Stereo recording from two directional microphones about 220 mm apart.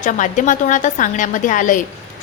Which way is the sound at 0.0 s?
35° left (ahead or behind).